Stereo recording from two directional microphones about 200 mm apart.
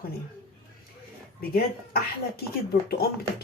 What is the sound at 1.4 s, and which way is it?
Speech, 50° left (ahead or behind).